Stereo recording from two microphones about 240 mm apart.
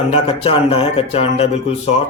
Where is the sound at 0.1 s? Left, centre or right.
Left.